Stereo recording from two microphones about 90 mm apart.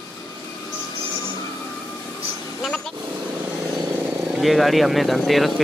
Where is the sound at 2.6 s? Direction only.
5° left (ahead or behind).